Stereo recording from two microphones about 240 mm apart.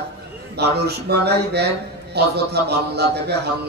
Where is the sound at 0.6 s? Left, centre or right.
Right.